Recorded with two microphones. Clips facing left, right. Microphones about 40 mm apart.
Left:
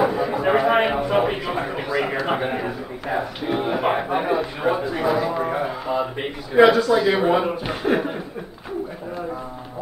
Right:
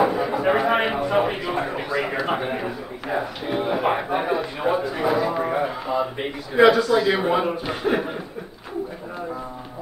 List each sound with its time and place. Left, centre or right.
0.0 s speech: centre